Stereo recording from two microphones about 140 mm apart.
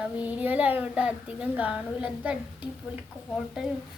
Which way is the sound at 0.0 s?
10° right (ahead or behind).